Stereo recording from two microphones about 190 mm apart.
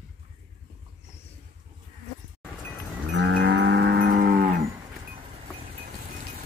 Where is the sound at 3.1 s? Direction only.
70° right (ahead or behind); by 4.6 s 50° right (ahead or behind).